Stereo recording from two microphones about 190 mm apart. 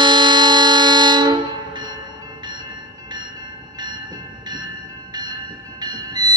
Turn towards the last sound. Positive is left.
turn(degrees=-20)  # may be behind; listen again after turning